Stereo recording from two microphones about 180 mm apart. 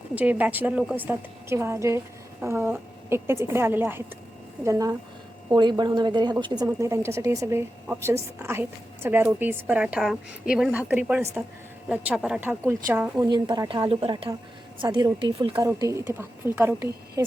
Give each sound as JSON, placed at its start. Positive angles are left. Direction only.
{"t": 0.1, "sound": "a woman's voice", "side_deg": -10}
{"t": 15.5, "sound": "a woman's voice", "side_deg": -15}